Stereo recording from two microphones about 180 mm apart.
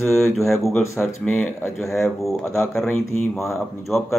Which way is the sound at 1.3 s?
5° left (ahead or behind).